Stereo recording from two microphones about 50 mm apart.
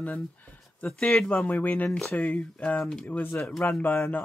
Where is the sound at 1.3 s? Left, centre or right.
Left.